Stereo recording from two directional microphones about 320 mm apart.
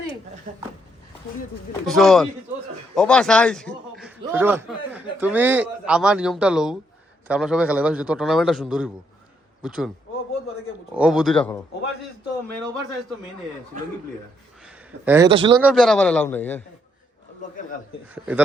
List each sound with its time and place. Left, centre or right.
0.5 s speech: right
1.9 s a man's voice: centre
2.9 s a sound: centre
4.2 s a man's voice: centre
10.9 s a man's voice: centre
15.0 s a man's voice: centre
15.6 s a man's voice: centre
18.1 s a man's voice: centre